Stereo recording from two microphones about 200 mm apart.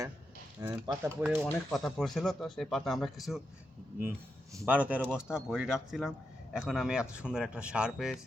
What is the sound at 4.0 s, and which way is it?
Speech, 15° right (ahead or behind).